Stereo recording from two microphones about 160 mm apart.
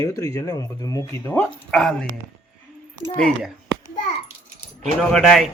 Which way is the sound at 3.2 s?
5° left (ahead or behind).